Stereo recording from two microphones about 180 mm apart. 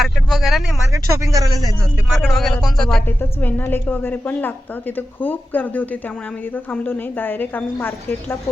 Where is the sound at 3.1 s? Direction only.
10° left (ahead or behind).